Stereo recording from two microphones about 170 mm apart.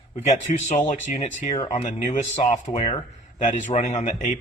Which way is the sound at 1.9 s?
45° left (ahead or behind).